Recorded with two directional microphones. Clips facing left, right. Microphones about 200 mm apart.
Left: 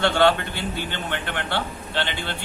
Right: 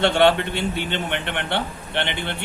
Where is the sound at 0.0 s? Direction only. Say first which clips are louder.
Right 2 dB; 25° right (ahead or behind).